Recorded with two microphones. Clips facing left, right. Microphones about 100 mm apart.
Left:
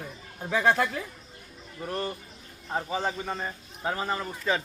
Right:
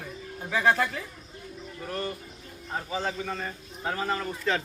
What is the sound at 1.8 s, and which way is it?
A man's voice, 30° left (ahead or behind).